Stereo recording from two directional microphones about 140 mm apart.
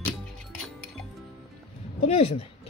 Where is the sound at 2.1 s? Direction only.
45° left (ahead or behind).